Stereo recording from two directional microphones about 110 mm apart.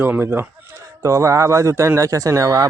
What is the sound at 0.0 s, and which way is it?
Speech, 20° right (ahead or behind).